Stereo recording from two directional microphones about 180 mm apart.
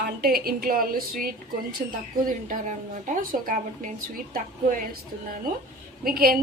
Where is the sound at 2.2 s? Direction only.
45° right (ahead or behind).